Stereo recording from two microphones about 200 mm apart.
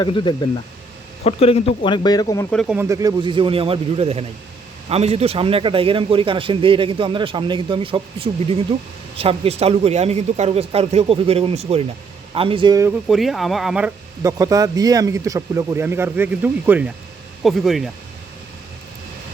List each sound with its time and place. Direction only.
0.0 s speech: 25° left (ahead or behind)
2.5 s speech: centre (ahead or behind)
2.7 s a man's voice: 15° right (ahead or behind)
13.1 s speech: centre (ahead or behind)
14.2 s speech: 15° right (ahead or behind); by 17.8 s centre (ahead or behind)